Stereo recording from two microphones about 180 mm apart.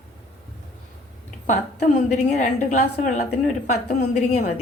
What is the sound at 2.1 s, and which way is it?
A woman's voice, 40° left (ahead or behind).